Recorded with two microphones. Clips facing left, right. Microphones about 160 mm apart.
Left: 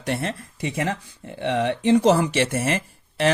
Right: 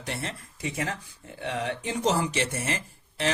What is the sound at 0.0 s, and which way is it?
Speech, 65° left (ahead or behind).